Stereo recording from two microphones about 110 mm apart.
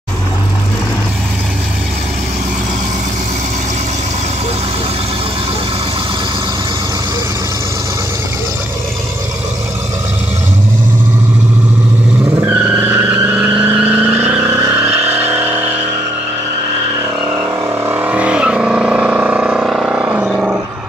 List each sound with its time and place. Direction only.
12.4 s vehicle: 20° right (ahead or behind)
17.8 s vehicle: 15° right (ahead or behind)
20.2 s a sound: 5° right (ahead or behind)